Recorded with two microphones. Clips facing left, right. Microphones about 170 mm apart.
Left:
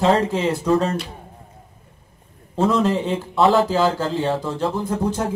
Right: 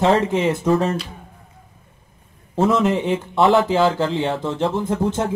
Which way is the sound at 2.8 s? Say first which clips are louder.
Right 1 dB; 20° right (ahead or behind).